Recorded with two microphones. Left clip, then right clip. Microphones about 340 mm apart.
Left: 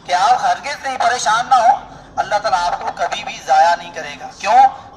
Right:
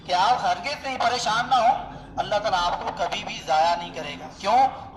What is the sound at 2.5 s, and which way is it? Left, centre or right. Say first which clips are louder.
Speech: left 6 dB; left.